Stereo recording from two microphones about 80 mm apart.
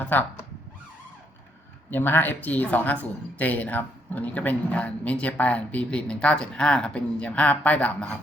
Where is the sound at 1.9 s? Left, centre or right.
Left.